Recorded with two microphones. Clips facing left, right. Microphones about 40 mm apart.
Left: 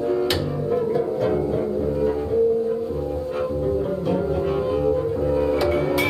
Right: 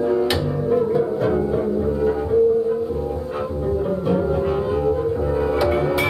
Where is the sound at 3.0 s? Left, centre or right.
Centre.